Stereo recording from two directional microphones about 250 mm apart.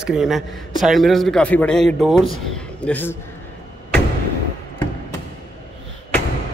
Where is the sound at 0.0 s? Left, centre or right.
Centre.